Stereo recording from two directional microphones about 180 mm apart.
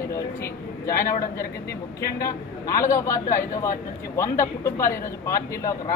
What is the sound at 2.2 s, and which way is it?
A man's voice, 20° left (ahead or behind).